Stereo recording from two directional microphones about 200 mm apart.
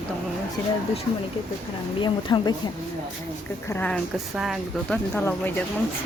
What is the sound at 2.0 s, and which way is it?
Speech, 20° left (ahead or behind).